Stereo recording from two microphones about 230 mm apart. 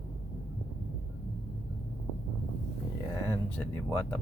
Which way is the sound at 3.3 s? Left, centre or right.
Centre.